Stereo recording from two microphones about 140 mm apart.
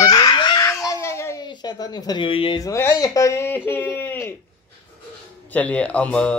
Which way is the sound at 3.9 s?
15° left (ahead or behind).